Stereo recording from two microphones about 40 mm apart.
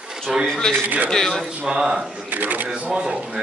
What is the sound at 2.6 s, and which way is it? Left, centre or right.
Speech, right.